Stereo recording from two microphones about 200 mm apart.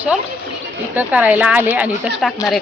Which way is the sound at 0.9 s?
5° right (ahead or behind).